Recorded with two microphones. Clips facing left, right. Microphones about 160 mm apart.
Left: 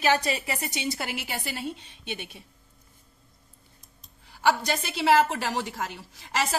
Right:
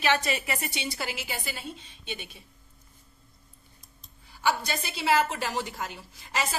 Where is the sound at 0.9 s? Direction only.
60° left (ahead or behind).